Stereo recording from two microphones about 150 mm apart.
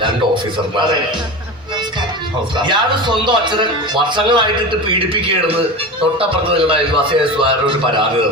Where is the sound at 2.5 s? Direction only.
30° right (ahead or behind).